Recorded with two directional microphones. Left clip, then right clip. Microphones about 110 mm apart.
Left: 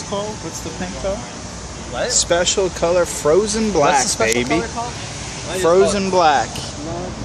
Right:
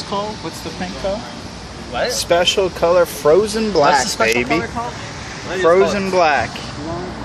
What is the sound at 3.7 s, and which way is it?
Speech, 20° left (ahead or behind).